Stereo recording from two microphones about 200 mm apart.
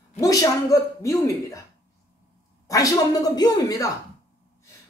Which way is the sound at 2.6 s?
15° left (ahead or behind).